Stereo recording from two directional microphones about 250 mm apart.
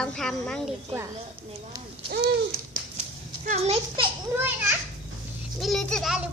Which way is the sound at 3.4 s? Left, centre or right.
Right.